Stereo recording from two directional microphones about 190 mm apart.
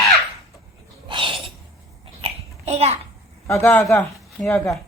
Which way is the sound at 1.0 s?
25° right (ahead or behind).